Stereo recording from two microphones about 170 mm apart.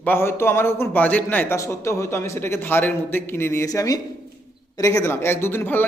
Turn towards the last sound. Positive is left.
turn(degrees=10)  # may be behind; listen again after turning